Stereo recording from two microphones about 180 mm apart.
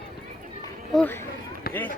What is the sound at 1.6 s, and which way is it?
Run, 55° left (ahead or behind).